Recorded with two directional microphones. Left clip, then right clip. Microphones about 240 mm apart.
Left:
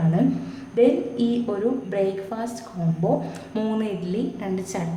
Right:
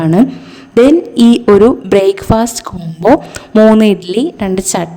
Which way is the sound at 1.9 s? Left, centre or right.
Right.